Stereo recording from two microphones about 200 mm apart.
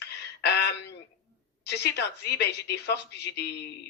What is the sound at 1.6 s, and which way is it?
Speech, 55° left (ahead or behind).